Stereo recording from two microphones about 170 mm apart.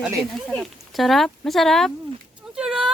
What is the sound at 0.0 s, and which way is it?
Speech, centre (ahead or behind).